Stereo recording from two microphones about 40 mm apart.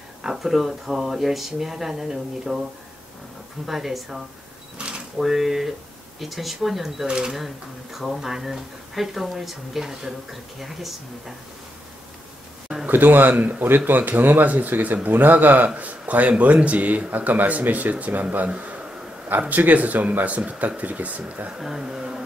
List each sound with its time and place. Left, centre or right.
0.2 s speech: centre
3.6 s speech: centre
4.7 s a sound: right
5.1 s speech: centre
7.1 s speech: right
7.3 s speech: centre
12.9 s a man's voice: right
19.5 s speech: right
21.5 s speech: centre